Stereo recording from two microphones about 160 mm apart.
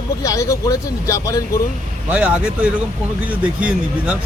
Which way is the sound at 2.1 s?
10° right (ahead or behind).